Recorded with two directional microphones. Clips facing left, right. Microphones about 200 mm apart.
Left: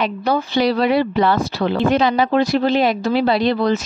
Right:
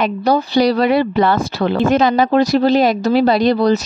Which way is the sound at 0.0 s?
40° right (ahead or behind).